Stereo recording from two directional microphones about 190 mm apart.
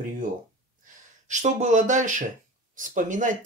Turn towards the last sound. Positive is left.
turn(degrees=-45)  # may be behind; listen again after turning